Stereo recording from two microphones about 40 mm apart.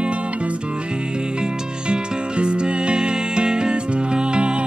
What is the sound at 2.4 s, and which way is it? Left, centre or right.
Music, right.